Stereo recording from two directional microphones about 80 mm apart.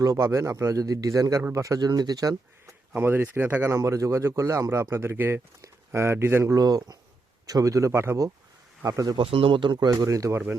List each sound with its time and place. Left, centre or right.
0.2 s speech: right
2.9 s speech: right
9.1 s speech: right
9.9 s speech: right
10.3 s speech: right